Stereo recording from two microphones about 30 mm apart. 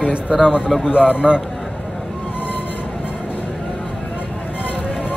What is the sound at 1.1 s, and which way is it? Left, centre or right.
Speech, right.